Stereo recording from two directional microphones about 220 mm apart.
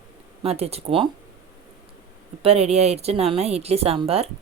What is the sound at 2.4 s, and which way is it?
Speech, 30° right (ahead or behind).